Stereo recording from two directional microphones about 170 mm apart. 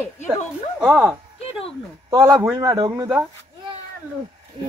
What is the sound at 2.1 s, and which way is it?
A woman's voice, 20° right (ahead or behind).